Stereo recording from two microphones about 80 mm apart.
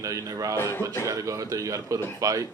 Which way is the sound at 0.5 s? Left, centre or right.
Left.